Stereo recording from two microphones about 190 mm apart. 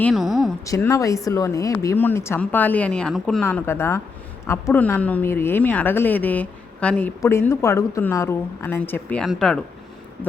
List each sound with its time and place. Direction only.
0.0 s a woman's voice: centre (ahead or behind)
0.6 s speech: 15° left (ahead or behind); by 9.6 s centre (ahead or behind)